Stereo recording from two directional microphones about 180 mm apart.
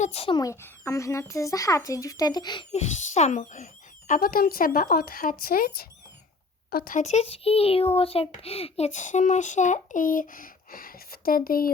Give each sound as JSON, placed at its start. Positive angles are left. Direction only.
{"t": 0.0, "sound": "a child's voice", "side_deg": 35}
{"t": 2.7, "sound": "a child's voice", "side_deg": 40}